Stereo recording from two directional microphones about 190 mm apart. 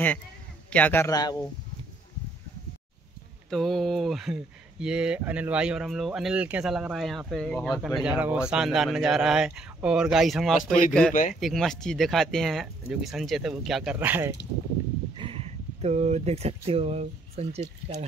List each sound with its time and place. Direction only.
0.7 s a man's voice: 10° left (ahead or behind)
3.4 s speech: centre (ahead or behind)
15.1 s speech: 30° right (ahead or behind)